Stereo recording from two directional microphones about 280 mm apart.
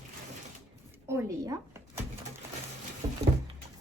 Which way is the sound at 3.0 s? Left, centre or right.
Centre.